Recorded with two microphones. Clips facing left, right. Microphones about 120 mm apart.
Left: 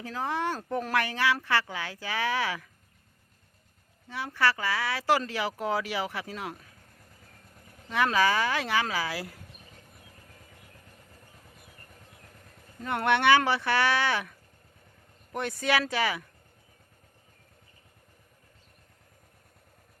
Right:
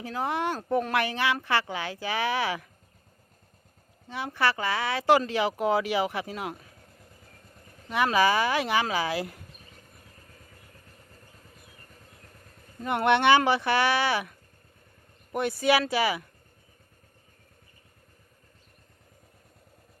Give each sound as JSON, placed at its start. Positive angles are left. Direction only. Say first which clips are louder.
{"t": 0.0, "sound": "speech", "louder": "right 2 dB", "side_deg": -15}
{"t": 4.1, "sound": "speech", "louder": "right 1 dB", "side_deg": -20}
{"t": 7.9, "sound": "speech", "louder": "right 2 dB", "side_deg": -15}
{"t": 12.8, "sound": "speech", "louder": "right 2 dB", "side_deg": -15}